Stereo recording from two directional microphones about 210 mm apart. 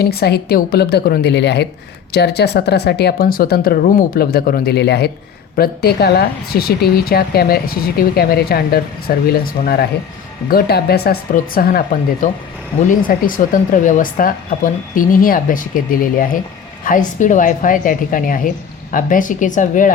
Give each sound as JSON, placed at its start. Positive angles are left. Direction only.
{"t": 0.0, "sound": "speech", "side_deg": 50}